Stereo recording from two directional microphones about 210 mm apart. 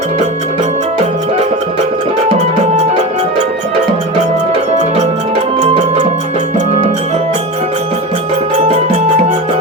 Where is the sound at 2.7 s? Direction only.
30° right (ahead or behind).